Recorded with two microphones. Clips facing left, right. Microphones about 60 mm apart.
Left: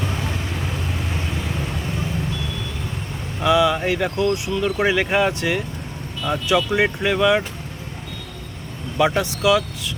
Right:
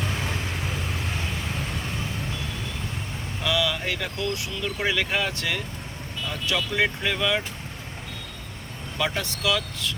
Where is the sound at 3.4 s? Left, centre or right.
Left.